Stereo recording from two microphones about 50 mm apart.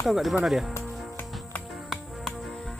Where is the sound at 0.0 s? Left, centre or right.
Centre.